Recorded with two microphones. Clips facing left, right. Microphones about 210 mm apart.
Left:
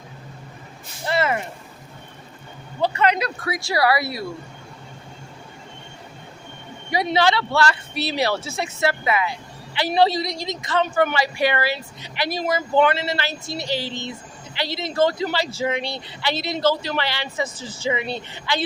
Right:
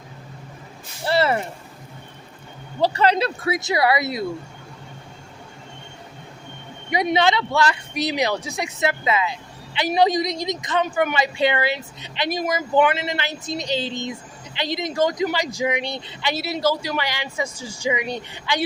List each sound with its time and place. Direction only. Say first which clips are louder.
1.0 s a sound: right 2 dB; 35° right (ahead or behind)
2.8 s speech: right 2 dB; 35° right (ahead or behind)
6.9 s speech: even; 20° right (ahead or behind)
16.3 s speech: left 1 dB; 10° right (ahead or behind)